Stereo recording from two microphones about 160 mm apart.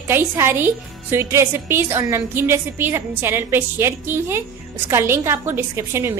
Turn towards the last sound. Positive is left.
turn(degrees=-15)  # may be behind; listen again after turning